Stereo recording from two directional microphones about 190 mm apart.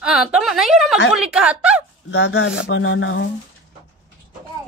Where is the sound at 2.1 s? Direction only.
90° left.